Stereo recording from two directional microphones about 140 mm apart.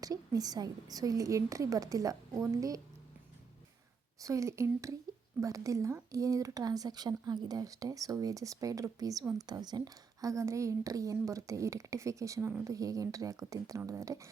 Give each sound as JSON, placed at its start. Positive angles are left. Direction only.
{"t": 0.0, "sound": "a woman's voice", "side_deg": -25}
{"t": 4.2, "sound": "a woman's voice", "side_deg": -20}